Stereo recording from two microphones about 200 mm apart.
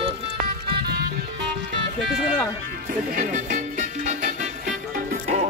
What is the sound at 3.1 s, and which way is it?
Music, 40° right (ahead or behind).